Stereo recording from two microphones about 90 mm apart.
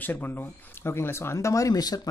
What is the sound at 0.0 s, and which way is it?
Speech, 20° left (ahead or behind).